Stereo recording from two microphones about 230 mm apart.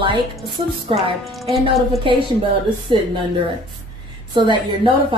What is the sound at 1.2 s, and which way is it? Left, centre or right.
Speech, centre.